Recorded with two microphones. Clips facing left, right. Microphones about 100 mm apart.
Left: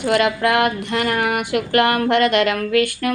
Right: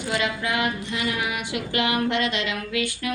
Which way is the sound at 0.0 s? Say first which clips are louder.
Left 9 dB; 60° left (ahead or behind).